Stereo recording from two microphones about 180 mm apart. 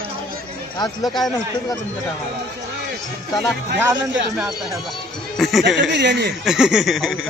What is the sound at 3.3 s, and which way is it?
Speech, centre (ahead or behind).